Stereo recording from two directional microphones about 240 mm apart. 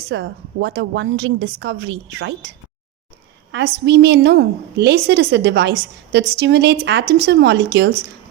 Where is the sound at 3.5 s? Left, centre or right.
Right.